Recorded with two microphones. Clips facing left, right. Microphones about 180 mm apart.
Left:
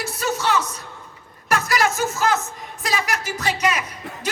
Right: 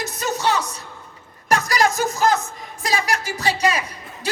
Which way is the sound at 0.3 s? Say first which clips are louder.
Right 2 dB; 15° right (ahead or behind).